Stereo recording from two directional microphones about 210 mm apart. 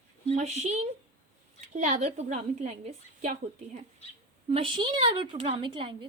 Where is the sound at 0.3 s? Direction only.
35° right (ahead or behind).